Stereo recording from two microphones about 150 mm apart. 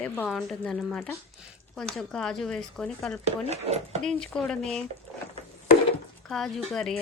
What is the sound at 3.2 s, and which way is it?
Speech, 45° right (ahead or behind).